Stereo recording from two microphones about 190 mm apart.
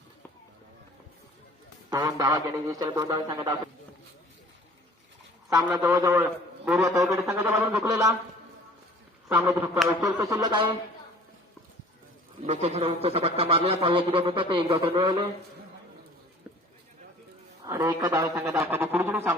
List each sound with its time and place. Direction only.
1.9 s a man's voice: 20° right (ahead or behind)
5.9 s a man's voice: 15° right (ahead or behind)
9.3 s a man's voice: 15° right (ahead or behind)
12.4 s a man's voice: 35° right (ahead or behind)
17.7 s a man's voice: 20° right (ahead or behind)